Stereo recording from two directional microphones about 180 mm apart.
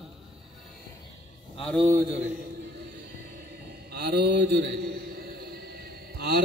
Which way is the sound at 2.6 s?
70° right (ahead or behind).